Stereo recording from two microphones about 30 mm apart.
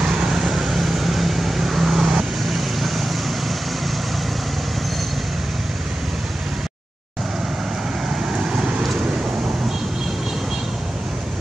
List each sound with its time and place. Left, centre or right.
0.0 s vehicle: right
2.4 s vehicle: centre
8.2 s vehicle: right